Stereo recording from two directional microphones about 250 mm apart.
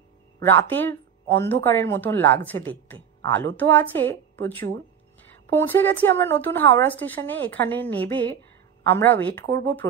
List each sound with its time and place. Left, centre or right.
0.5 s a woman's voice: centre
2.9 s a sound: centre
3.5 s a woman's voice: centre
9.4 s speech: right